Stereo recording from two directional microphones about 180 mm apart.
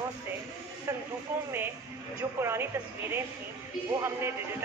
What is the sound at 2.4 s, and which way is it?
Speech, 15° right (ahead or behind).